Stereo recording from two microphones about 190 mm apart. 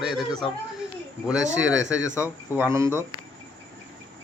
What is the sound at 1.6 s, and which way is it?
Speech, 75° right (ahead or behind).